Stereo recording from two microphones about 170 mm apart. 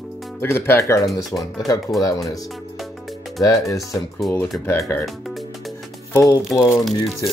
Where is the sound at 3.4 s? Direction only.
20° left (ahead or behind).